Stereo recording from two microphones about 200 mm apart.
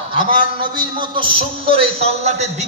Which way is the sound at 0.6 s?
20° right (ahead or behind).